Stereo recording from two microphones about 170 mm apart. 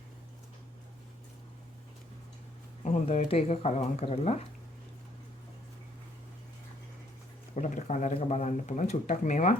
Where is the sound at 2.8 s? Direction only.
45° left (ahead or behind).